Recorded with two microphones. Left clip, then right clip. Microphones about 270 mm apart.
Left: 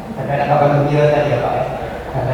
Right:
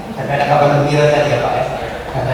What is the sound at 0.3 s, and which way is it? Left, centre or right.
A man's voice, centre.